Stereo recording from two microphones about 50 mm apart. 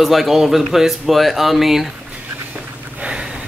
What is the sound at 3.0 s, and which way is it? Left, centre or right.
Gasp, centre.